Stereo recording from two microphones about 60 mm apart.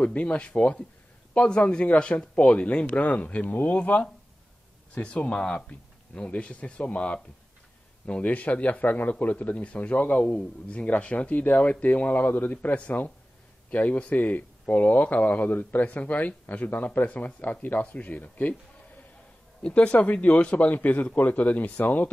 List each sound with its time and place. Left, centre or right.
0.0 s speech: left
19.6 s speech: left